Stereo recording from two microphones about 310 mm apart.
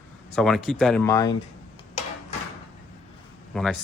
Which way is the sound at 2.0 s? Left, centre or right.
Left.